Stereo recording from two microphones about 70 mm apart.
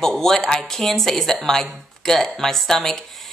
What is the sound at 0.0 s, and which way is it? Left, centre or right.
Speech, centre.